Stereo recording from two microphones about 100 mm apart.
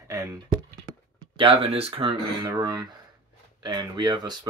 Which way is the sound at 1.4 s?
65° right (ahead or behind).